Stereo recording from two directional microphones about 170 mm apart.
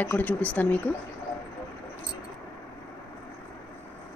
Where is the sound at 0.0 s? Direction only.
10° left (ahead or behind).